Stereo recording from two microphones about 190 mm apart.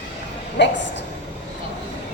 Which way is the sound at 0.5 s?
70° left (ahead or behind).